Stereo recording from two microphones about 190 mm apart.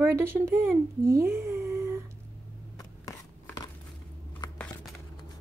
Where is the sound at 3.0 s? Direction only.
15° left (ahead or behind).